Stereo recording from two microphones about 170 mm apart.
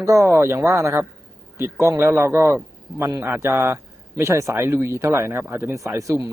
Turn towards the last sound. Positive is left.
turn(degrees=-20)  # may be behind; listen again after turning